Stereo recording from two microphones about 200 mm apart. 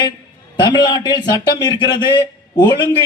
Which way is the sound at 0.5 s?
20° left (ahead or behind).